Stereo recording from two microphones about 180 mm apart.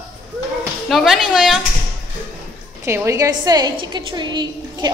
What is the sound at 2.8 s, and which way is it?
A woman's voice, 15° right (ahead or behind).